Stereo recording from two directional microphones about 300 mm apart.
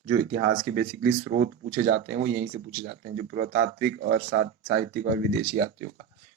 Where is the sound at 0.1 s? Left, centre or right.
Right.